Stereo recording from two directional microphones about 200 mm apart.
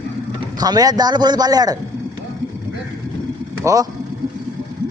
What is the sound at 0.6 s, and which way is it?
A man's voice, 20° right (ahead or behind).